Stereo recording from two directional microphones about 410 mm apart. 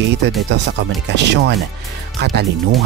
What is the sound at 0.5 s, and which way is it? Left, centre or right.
Speech, right.